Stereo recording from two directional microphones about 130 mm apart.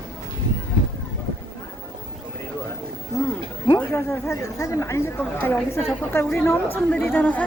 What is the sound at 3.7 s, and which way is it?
A woman's voice, 20° left (ahead or behind).